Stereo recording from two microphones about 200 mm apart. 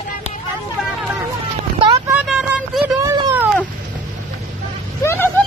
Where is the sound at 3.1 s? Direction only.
10° right (ahead or behind).